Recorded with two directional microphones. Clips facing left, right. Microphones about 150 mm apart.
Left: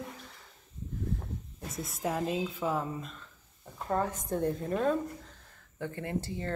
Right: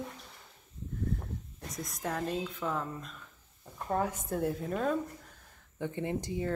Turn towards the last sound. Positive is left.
turn(degrees=-15)  # may be behind; listen again after turning